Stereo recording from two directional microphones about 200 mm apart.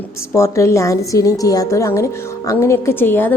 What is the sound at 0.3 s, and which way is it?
A woman's voice, 15° left (ahead or behind).